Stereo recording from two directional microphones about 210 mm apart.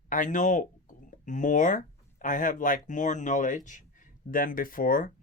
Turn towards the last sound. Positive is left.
turn(degrees=40)  # may be behind; listen again after turning